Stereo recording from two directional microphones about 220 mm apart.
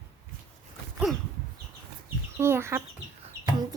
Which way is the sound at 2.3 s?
10° right (ahead or behind).